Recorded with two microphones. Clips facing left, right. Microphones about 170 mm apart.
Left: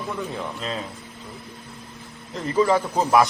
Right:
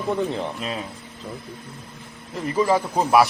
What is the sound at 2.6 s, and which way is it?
Speech, 10° right (ahead or behind).